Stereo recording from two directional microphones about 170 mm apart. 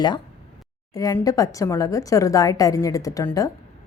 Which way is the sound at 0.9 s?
20° left (ahead or behind).